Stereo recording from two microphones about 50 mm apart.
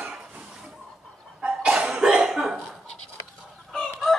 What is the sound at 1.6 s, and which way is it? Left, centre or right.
Cough, centre.